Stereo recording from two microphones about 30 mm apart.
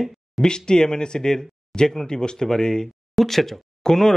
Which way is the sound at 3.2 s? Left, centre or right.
Centre.